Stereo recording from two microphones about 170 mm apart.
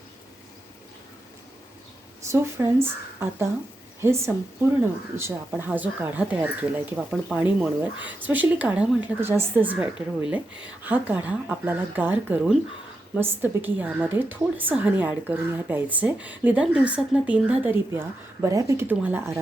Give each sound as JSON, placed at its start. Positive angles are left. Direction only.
{"t": 2.2, "sound": "a woman's voice", "side_deg": -15}